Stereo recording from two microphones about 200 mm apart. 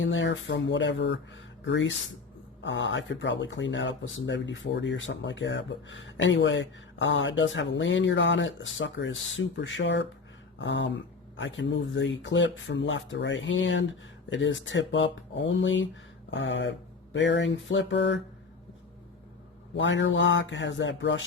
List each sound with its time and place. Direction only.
0.0 s speech: 65° left (ahead or behind)
19.7 s speech: 65° left (ahead or behind)